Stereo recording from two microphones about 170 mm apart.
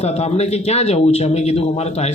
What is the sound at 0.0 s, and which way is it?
Speech, 40° left (ahead or behind).